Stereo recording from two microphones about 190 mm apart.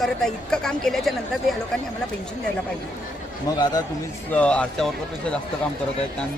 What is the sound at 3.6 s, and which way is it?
Speech, 20° left (ahead or behind).